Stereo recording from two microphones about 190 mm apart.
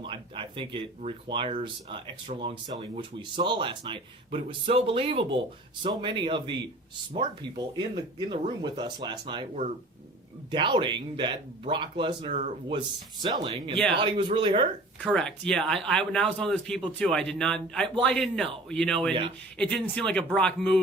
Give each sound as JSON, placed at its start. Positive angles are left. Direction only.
{"t": 0.0, "sound": "speech", "side_deg": -25}
{"t": 10.5, "sound": "speech", "side_deg": -25}
{"t": 12.3, "sound": "speech", "side_deg": -40}
{"t": 13.2, "sound": "speech", "side_deg": -25}
{"t": 15.0, "sound": "speech", "side_deg": 5}